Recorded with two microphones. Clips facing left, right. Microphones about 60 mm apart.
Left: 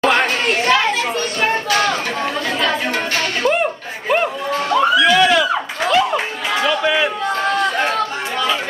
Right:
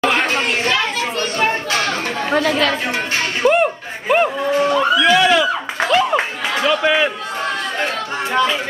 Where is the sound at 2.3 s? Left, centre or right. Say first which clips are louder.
Right 7 dB; right.